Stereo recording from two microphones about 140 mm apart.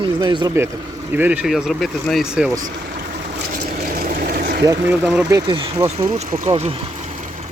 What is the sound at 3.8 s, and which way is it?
Vehicle, 90° right.